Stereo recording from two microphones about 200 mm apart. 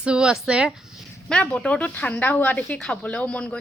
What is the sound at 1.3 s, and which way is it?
Speech, 5° left (ahead or behind).